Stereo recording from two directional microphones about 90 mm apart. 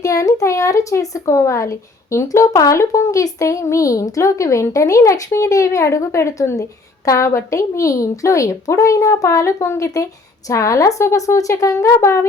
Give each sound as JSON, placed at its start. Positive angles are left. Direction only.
{"t": 0.0, "sound": "speech", "side_deg": 40}